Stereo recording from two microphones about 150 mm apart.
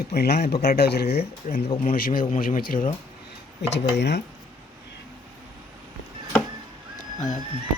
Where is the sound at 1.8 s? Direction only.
70° left (ahead or behind).